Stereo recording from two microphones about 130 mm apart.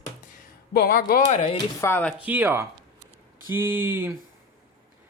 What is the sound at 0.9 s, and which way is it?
Speech, 90° left.